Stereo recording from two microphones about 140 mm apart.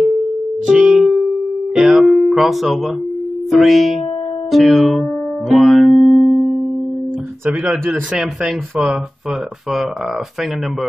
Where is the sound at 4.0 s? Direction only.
40° left (ahead or behind).